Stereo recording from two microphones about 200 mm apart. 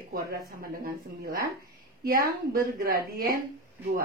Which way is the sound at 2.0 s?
50° right (ahead or behind).